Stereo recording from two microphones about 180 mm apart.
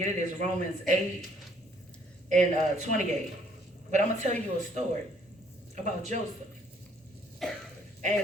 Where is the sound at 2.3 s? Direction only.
40° right (ahead or behind).